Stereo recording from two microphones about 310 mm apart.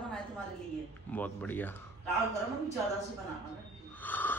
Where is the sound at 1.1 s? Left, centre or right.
Centre.